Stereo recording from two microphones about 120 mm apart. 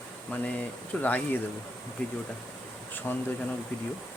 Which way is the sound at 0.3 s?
10° left (ahead or behind).